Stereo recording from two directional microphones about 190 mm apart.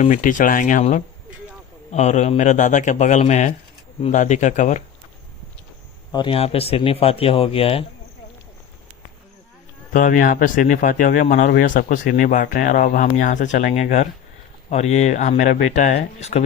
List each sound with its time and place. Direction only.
0.0 s speech: 40° left (ahead or behind)
6.1 s speech: 25° left (ahead or behind)
9.9 s speech: 45° left (ahead or behind)